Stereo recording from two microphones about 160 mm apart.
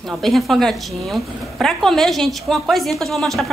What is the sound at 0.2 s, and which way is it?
A woman's voice, centre (ahead or behind).